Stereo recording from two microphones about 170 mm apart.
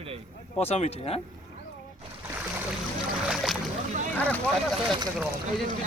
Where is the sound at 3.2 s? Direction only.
Centre (ahead or behind).